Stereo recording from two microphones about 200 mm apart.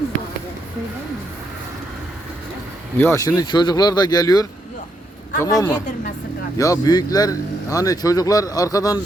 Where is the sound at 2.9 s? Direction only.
10° left (ahead or behind).